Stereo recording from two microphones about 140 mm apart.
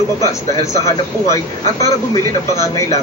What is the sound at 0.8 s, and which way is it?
Speech, 20° left (ahead or behind).